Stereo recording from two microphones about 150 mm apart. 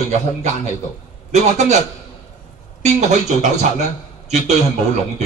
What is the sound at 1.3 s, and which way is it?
Speech, 50° right (ahead or behind).